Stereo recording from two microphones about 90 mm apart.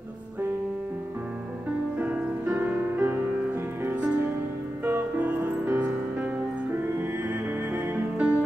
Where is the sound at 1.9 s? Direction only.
15° right (ahead or behind).